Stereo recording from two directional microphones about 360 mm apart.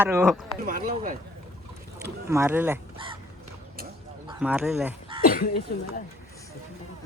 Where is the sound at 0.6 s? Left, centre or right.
Right.